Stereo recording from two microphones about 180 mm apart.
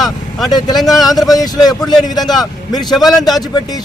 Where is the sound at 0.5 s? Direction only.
20° left (ahead or behind).